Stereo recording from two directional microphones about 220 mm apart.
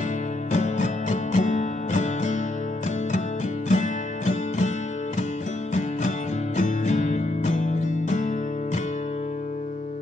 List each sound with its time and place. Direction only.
0.5 s music: 35° left (ahead or behind)
3.6 s music: 35° left (ahead or behind)
5.8 s music: 35° left (ahead or behind)